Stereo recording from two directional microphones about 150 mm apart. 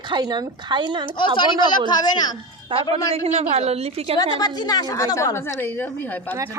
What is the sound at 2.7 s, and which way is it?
A woman's voice, 35° right (ahead or behind).